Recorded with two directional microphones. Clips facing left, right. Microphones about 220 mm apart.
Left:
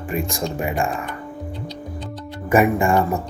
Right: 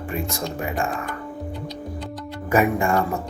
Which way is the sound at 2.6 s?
5° left (ahead or behind).